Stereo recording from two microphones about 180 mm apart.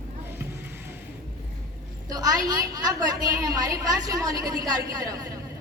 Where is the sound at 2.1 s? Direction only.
20° right (ahead or behind).